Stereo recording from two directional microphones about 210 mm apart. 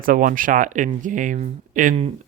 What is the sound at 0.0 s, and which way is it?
Speech, 40° right (ahead or behind).